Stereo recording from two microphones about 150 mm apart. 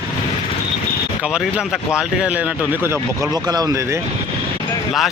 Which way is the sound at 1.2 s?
5° right (ahead or behind).